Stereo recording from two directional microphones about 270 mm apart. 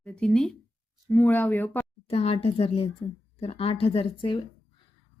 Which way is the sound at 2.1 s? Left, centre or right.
Left.